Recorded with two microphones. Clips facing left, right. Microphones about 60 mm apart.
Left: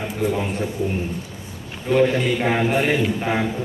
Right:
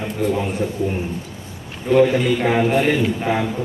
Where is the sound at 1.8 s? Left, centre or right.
Centre.